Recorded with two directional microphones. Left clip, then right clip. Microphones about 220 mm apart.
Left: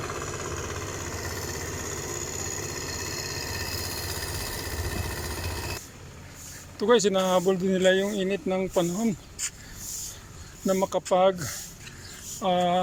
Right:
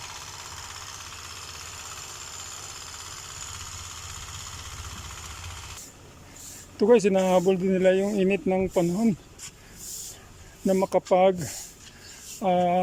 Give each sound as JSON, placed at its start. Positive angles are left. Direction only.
{"t": 0.0, "sound": "vehicle", "side_deg": 50}
{"t": 6.7, "sound": "speech", "side_deg": -15}
{"t": 10.7, "sound": "speech", "side_deg": -10}